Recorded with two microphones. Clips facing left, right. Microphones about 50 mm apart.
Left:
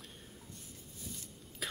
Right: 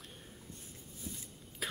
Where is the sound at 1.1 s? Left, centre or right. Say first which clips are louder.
Right 2 dB; right.